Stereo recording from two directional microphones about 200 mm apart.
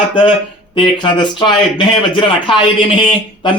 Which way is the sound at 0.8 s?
25° left (ahead or behind).